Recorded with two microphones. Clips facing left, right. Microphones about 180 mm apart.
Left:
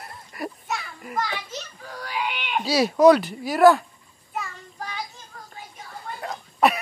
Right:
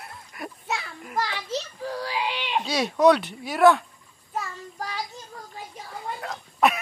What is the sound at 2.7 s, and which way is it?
Speech, centre (ahead or behind).